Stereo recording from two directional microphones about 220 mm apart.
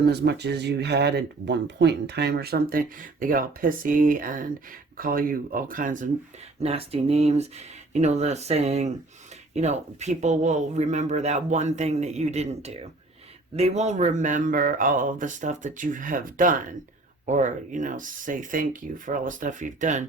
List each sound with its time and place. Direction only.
0.0 s speech: 50° right (ahead or behind)